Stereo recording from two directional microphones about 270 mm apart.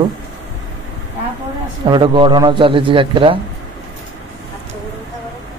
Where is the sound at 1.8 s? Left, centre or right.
Centre.